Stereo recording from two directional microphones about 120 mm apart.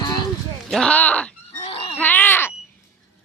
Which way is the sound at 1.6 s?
50° left (ahead or behind).